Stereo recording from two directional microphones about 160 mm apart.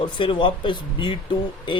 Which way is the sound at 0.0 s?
30° left (ahead or behind).